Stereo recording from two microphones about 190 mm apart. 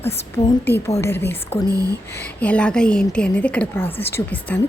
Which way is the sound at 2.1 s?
5° left (ahead or behind).